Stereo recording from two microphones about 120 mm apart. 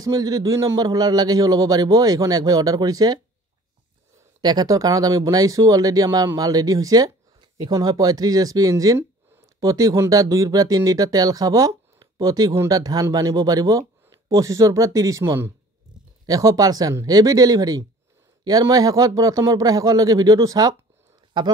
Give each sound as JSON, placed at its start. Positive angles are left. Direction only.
{"t": 0.0, "sound": "a man's voice", "side_deg": -30}
{"t": 4.4, "sound": "a man's voice", "side_deg": -35}